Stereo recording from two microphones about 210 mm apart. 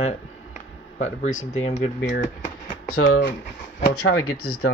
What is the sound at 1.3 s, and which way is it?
Speech, 80° left.